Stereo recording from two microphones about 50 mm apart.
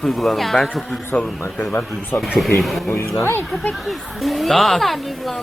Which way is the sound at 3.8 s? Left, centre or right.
Centre.